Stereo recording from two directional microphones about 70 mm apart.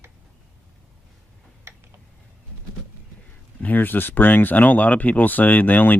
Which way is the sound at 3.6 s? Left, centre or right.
Left.